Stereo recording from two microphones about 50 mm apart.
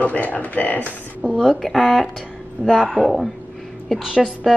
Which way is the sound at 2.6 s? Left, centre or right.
Right.